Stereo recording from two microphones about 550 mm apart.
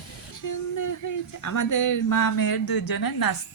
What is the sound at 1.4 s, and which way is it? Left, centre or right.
Speech, left.